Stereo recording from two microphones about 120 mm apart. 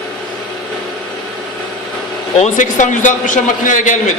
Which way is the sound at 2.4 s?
90° left.